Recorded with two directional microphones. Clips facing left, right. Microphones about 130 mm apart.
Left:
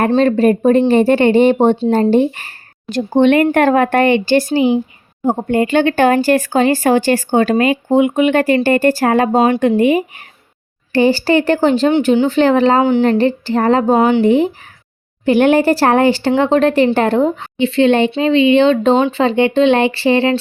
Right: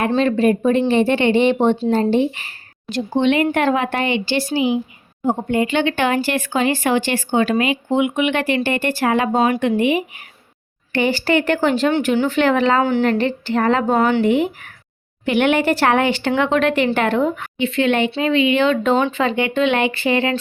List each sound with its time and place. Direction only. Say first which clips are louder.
0.2 s speech: left 2 dB; 40° left (ahead or behind)